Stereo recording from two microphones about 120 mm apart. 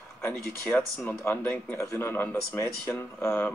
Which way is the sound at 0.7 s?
15° left (ahead or behind).